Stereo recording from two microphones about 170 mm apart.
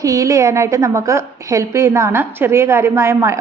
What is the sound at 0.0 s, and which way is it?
A woman's voice, 20° right (ahead or behind).